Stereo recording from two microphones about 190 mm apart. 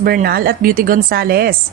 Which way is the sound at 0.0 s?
50° right (ahead or behind).